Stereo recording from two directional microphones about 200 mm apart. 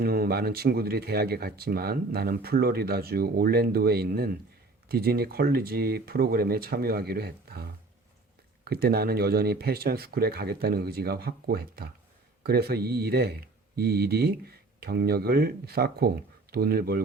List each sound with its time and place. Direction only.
0.0 s speech: 50° right (ahead or behind)